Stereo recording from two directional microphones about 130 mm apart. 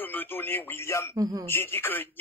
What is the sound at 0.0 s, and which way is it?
Speech, 15° left (ahead or behind).